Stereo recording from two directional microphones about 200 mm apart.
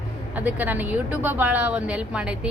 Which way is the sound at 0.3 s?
10° right (ahead or behind).